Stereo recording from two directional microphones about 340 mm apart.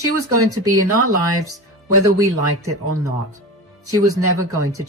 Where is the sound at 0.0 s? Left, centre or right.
Right.